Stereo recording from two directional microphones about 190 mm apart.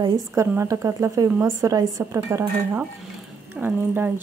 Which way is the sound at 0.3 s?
10° right (ahead or behind).